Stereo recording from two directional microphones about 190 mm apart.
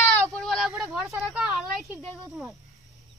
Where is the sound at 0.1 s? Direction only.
5° left (ahead or behind).